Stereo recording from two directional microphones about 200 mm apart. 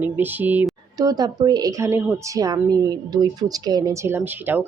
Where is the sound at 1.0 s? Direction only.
20° right (ahead or behind).